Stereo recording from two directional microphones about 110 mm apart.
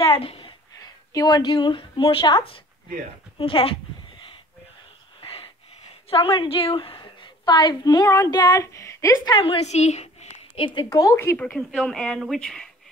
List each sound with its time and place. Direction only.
0.0 s a sound: 55° left (ahead or behind)
0.7 s speech: 35° left (ahead or behind)
3.3 s speech: 55° left (ahead or behind)
5.2 s wheeze: 60° left (ahead or behind)
6.0 s a woman's voice: 60° left (ahead or behind); by 9.4 s 35° left (ahead or behind)
9.4 s speech: 55° left (ahead or behind)
9.7 s a sound: 90° left
10.5 s a woman's voice: 50° left (ahead or behind)
10.9 s speech: 30° left (ahead or behind)
11.5 s speech: 5° left (ahead or behind)